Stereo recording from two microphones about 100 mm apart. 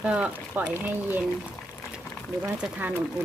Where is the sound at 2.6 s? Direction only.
15° right (ahead or behind).